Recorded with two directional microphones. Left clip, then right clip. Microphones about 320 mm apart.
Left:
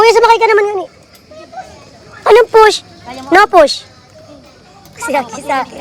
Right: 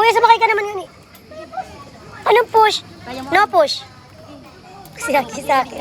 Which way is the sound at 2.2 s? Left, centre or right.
Left.